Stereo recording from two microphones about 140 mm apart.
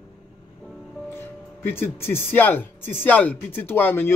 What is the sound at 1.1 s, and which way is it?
Speech, 15° left (ahead or behind).